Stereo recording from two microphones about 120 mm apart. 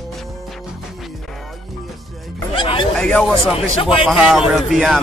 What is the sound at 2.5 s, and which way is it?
Speech, 45° left (ahead or behind).